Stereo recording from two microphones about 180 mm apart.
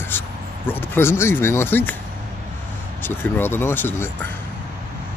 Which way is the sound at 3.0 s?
10° left (ahead or behind).